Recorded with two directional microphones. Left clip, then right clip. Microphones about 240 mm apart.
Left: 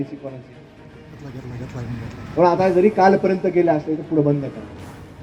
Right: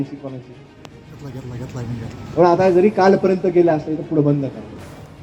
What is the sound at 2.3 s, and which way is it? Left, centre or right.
Speech, right.